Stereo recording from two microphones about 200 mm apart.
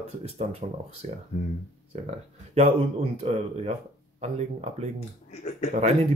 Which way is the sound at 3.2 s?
30° right (ahead or behind).